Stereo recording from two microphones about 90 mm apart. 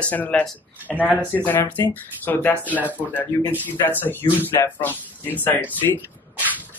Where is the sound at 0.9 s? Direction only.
Centre (ahead or behind).